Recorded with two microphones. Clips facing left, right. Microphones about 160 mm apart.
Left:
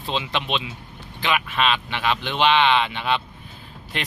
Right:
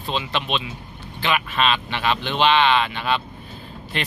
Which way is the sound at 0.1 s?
20° left (ahead or behind).